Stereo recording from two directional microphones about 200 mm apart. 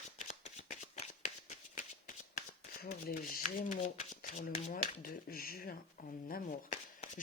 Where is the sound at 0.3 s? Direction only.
35° left (ahead or behind).